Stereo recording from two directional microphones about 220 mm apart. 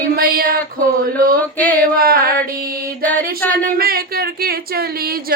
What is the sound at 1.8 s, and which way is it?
Speech, 40° right (ahead or behind).